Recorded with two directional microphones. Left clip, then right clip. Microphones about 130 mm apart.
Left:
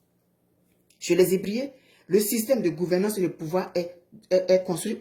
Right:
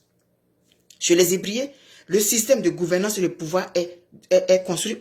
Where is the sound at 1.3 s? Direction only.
20° left (ahead or behind).